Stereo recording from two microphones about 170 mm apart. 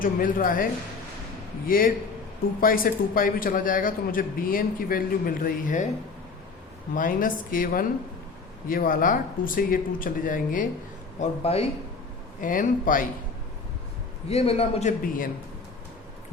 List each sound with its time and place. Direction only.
0.0 s a man's voice: 55° left (ahead or behind)
6.9 s a man's voice: 55° left (ahead or behind)
11.2 s a man's voice: 35° left (ahead or behind)
12.4 s speech: 50° left (ahead or behind)
14.3 s a man's voice: 35° left (ahead or behind); by 15.3 s 55° left (ahead or behind)